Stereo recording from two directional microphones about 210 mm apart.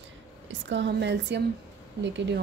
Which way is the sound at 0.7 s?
55° right (ahead or behind).